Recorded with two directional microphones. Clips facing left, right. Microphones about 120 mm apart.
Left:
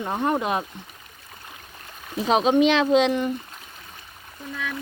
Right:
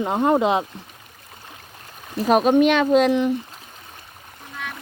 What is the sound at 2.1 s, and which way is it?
Speech, 5° right (ahead or behind).